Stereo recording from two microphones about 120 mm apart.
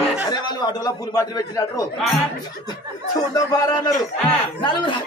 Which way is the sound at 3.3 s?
30° left (ahead or behind).